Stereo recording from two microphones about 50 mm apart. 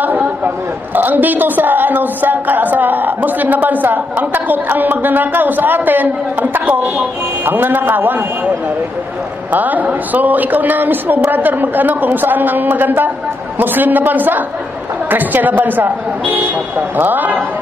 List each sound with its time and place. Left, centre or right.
0.9 s a woman's voice: right
9.5 s a woman's voice: right